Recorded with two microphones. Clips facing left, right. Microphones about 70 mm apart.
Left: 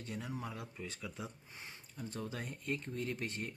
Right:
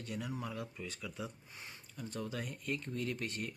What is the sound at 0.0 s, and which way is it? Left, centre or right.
Speech, left.